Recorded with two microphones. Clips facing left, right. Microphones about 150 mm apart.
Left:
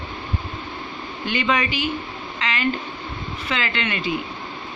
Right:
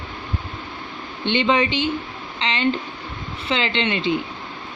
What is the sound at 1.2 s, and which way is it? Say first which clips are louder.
Speech: right 4 dB; 25° right (ahead or behind).